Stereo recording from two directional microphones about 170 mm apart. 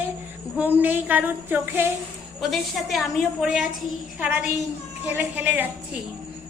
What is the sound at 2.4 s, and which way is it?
A woman's voice, centre (ahead or behind).